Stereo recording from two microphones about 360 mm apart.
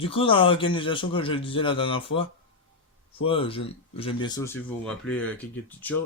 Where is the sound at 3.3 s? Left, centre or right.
Centre.